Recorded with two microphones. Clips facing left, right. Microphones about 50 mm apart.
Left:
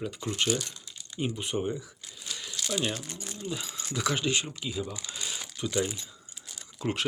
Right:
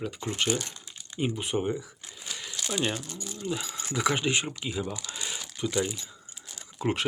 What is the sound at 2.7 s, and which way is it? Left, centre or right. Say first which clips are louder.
Speech: right 2 dB; centre.